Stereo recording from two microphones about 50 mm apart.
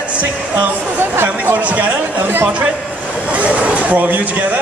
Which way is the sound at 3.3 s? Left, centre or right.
Right.